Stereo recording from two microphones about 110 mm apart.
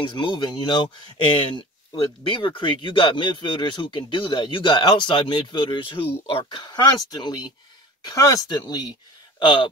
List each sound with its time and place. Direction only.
0.0 s speech: 50° left (ahead or behind)